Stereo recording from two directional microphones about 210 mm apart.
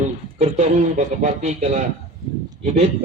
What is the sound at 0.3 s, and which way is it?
Speech, 30° right (ahead or behind).